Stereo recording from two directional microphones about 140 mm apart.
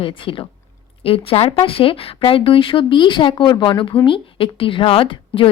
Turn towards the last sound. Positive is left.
turn(degrees=40)  # may be behind; listen again after turning